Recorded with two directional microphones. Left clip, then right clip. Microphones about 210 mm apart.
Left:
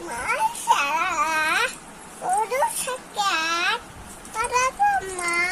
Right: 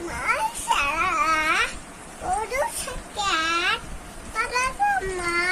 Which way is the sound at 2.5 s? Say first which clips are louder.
Left 3 dB; 10° right (ahead or behind).